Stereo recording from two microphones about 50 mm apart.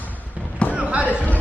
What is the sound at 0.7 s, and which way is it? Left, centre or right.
Basketball bounce, right.